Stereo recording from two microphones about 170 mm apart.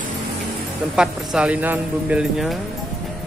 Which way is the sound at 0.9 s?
Centre (ahead or behind).